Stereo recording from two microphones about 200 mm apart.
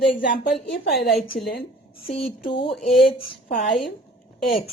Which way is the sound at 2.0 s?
25° left (ahead or behind).